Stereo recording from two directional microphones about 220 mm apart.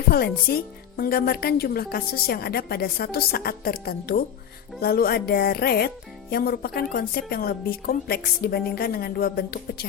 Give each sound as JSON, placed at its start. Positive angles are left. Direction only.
{"t": 0.1, "sound": "a woman's voice", "side_deg": 45}